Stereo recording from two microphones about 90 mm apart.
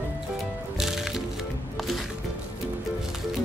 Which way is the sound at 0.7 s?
5° right (ahead or behind).